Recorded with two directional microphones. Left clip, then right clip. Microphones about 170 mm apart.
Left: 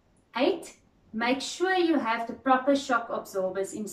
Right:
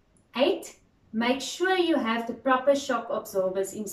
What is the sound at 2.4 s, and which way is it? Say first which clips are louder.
A woman's voice: right 1 dB; 15° right (ahead or behind).